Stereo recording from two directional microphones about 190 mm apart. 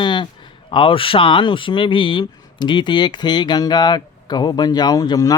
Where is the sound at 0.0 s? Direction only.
25° left (ahead or behind).